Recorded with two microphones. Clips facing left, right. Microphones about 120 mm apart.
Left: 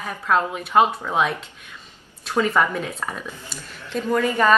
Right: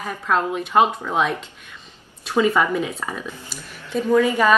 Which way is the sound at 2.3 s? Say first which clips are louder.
Right 2 dB; 10° right (ahead or behind).